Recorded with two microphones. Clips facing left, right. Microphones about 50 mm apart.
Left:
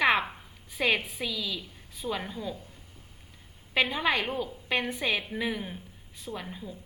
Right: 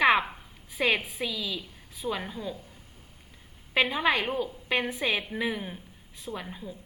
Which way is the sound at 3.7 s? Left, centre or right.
Centre.